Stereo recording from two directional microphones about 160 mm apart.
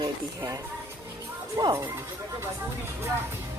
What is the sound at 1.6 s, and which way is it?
Speech, 25° right (ahead or behind).